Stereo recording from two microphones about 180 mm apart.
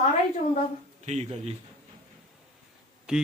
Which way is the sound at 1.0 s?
40° right (ahead or behind).